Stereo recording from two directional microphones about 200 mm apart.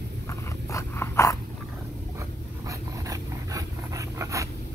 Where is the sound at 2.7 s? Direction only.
15° right (ahead or behind).